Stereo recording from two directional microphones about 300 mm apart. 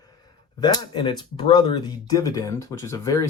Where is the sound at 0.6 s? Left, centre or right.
Centre.